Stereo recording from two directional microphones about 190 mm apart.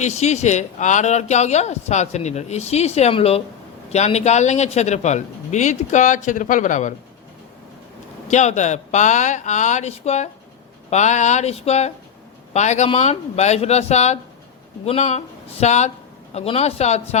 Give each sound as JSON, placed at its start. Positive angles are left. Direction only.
{"t": 0.0, "sound": "a man's voice", "side_deg": 35}
{"t": 8.3, "sound": "a man's voice", "side_deg": 40}